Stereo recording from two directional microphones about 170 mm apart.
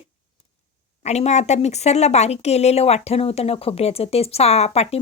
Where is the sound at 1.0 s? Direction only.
40° left (ahead or behind).